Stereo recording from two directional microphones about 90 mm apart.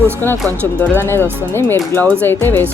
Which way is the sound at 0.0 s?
25° left (ahead or behind).